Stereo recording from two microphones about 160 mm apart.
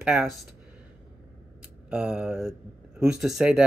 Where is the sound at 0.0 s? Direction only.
5° right (ahead or behind).